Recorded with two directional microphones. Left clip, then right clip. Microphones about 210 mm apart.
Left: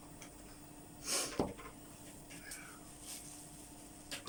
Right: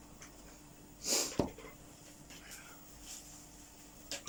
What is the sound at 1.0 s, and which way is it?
Snort, 20° right (ahead or behind).